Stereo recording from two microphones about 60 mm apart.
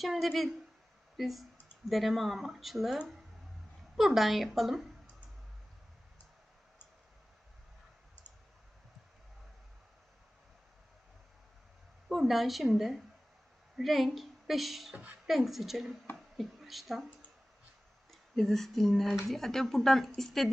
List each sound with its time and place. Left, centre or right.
0.0 s speech: centre
12.0 s a woman's voice: centre
14.9 s a woman's voice: right
15.3 s speech: centre
18.1 s speech: centre